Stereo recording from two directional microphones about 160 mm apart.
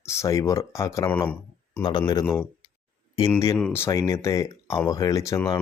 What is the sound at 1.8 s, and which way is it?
Speech, 25° left (ahead or behind).